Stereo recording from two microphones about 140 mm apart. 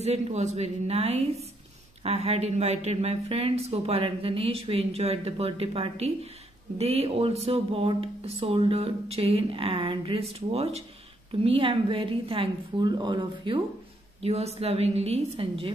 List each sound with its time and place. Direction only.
0.0 s a woman's voice: 50° right (ahead or behind); by 13.6 s 35° right (ahead or behind)
14.2 s speech: 50° right (ahead or behind)